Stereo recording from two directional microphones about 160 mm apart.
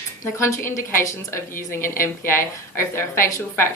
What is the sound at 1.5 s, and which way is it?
Speech, 60° left (ahead or behind).